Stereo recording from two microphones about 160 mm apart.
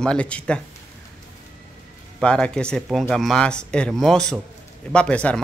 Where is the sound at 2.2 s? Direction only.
5° left (ahead or behind).